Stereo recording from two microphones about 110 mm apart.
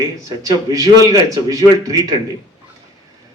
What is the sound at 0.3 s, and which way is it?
A man's voice, 30° right (ahead or behind).